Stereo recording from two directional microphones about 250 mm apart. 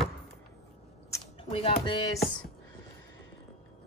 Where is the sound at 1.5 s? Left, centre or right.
Left.